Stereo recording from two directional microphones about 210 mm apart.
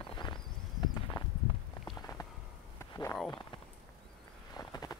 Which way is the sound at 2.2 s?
15° left (ahead or behind).